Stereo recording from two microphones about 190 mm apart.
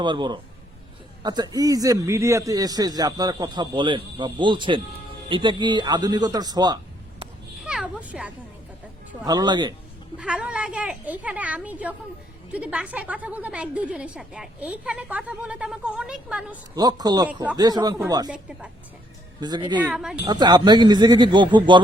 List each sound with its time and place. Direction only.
0.0 s a man's voice: 25° right (ahead or behind)
7.6 s a sound: 5° right (ahead or behind)
9.2 s a man's voice: 20° right (ahead or behind)
10.2 s a woman's voice: 5° right (ahead or behind)
16.7 s a man's voice: 20° right (ahead or behind)
18.3 s a woman's voice: 5° right (ahead or behind)
19.4 s a man's voice: 25° right (ahead or behind)
19.8 s a woman's voice: 5° right (ahead or behind)
20.2 s a man's voice: 20° right (ahead or behind)